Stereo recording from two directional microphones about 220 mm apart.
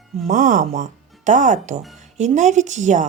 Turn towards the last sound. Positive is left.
turn(degrees=-35)  # may be behind; listen again after turning